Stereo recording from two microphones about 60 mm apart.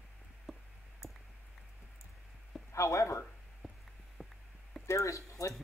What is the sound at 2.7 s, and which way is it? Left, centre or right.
Speech, left.